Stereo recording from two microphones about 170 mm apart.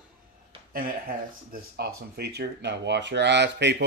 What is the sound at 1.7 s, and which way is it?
Speech, 70° right (ahead or behind).